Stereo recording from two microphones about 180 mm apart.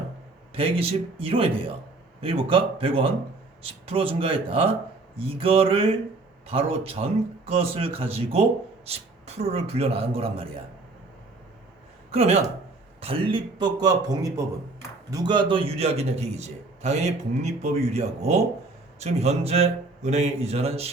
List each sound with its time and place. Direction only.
0.5 s a man's voice: 30° right (ahead or behind)
12.1 s a man's voice: 35° right (ahead or behind)